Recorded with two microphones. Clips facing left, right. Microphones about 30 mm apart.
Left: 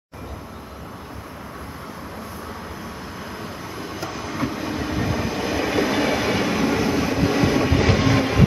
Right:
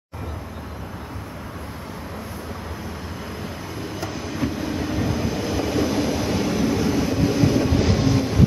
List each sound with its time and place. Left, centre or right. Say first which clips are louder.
4.0 s train: even; centre; by 5.7 s left
5.7 s train: left 2 dB; left
8.1 s train: left 1 dB; left